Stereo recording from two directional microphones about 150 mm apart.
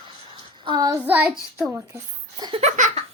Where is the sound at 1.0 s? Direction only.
10° right (ahead or behind).